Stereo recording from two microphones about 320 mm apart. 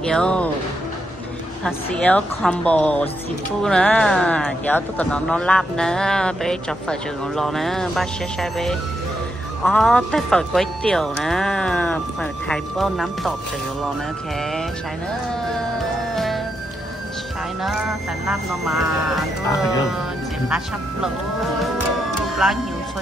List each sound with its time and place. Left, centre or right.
0.0 s speech: centre
1.6 s speech: centre
18.2 s speech: centre
20.4 s speech: centre
22.4 s speech: centre